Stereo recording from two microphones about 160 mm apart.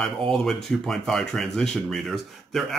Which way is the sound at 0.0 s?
5° left (ahead or behind).